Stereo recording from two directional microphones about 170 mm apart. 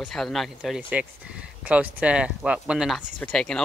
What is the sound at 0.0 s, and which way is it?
Speech, centre (ahead or behind).